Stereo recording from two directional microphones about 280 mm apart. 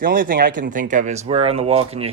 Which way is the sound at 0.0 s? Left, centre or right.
Right.